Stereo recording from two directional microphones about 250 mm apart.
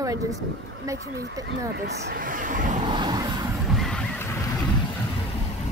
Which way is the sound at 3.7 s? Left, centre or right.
Centre.